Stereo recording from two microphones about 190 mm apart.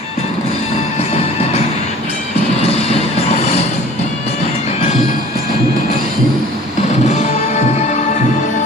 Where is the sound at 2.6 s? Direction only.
30° left (ahead or behind).